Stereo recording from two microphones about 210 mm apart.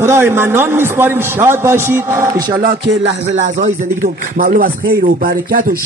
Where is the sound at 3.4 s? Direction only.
35° right (ahead or behind).